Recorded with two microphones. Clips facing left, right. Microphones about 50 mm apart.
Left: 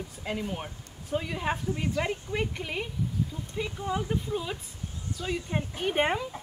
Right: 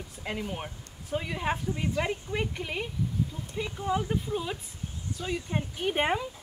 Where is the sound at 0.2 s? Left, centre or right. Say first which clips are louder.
Left 1 dB; centre.